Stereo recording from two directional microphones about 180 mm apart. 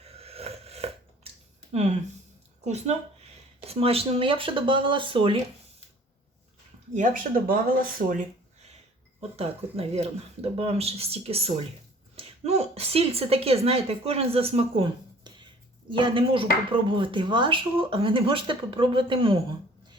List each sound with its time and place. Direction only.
0.0 s a sound: 35° right (ahead or behind)
1.7 s a woman's voice: 40° right (ahead or behind)
6.9 s speech: 50° right (ahead or behind)
9.3 s a woman's voice: 35° right (ahead or behind)